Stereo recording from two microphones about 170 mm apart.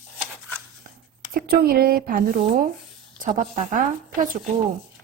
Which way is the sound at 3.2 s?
50° right (ahead or behind).